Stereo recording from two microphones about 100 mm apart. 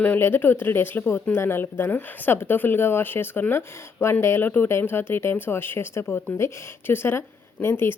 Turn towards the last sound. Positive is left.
turn(degrees=25)  # may be behind; listen again after turning